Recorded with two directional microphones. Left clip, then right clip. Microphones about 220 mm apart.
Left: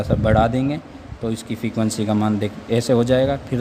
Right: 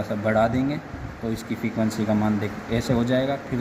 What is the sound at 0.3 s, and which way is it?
Speech, 50° left (ahead or behind).